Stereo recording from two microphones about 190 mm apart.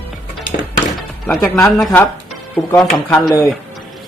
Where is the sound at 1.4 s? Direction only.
5° left (ahead or behind).